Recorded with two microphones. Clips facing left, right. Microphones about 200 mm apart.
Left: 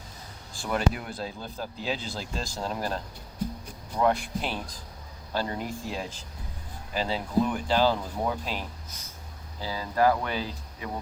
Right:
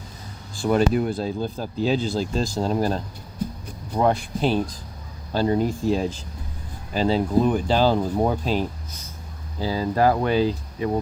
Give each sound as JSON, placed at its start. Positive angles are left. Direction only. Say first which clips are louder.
{"t": 0.7, "sound": "speech", "louder": "right 9 dB", "side_deg": -35}
{"t": 4.0, "sound": "speech", "louder": "right 5 dB", "side_deg": -30}